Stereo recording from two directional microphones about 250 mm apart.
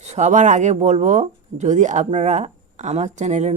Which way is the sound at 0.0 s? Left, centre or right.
Right.